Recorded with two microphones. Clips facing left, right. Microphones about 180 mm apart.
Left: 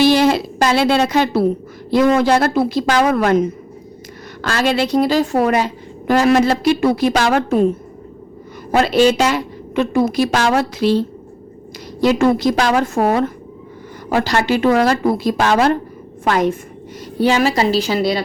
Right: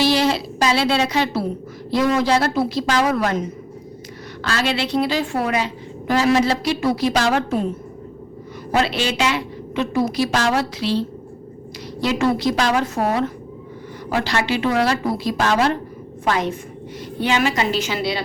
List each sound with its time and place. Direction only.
0.0 s a sound: 50° left (ahead or behind)
1.9 s a woman's voice: 55° left (ahead or behind)
8.7 s a woman's voice: 45° left (ahead or behind)
17.2 s a woman's voice: 40° left (ahead or behind)